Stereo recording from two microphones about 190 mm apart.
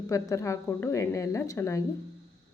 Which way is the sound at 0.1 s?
15° left (ahead or behind).